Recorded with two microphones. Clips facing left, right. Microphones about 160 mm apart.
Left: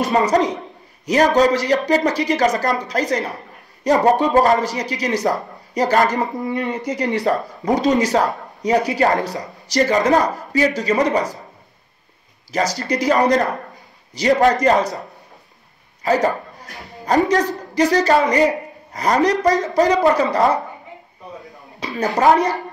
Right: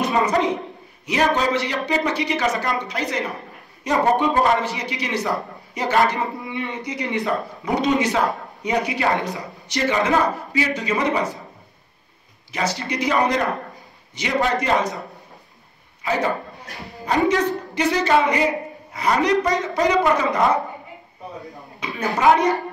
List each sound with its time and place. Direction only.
0.0 s speech: 40° left (ahead or behind)
12.5 s speech: 40° left (ahead or behind)
16.0 s a sound: 40° left (ahead or behind)
17.0 s speech: 40° left (ahead or behind)
21.7 s speech: 35° left (ahead or behind)